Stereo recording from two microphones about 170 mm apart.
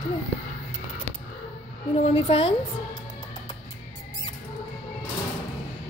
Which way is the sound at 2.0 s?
35° left (ahead or behind).